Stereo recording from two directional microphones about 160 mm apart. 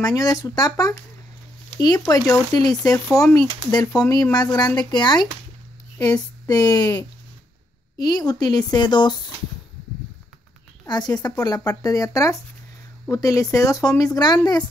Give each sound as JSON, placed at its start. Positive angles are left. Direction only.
{"t": 0.0, "sound": "speech", "side_deg": 20}
{"t": 10.9, "sound": "speech", "side_deg": 25}